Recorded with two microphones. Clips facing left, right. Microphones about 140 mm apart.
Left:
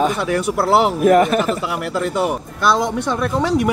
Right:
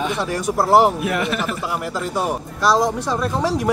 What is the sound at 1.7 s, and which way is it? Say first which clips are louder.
Speech: left 3 dB; 65° left (ahead or behind).